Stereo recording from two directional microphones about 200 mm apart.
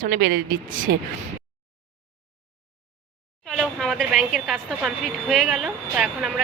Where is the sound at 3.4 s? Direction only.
Centre (ahead or behind).